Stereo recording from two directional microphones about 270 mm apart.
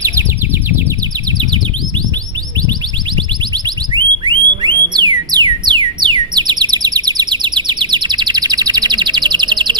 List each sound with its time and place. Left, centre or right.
3.5 s alarm: centre
4.9 s music: centre